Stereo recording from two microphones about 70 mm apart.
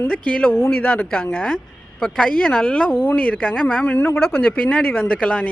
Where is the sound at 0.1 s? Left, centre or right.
Centre.